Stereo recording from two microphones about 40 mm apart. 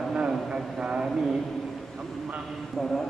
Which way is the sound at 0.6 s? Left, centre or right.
Centre.